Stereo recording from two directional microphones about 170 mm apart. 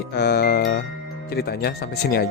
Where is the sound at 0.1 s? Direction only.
75° left (ahead or behind).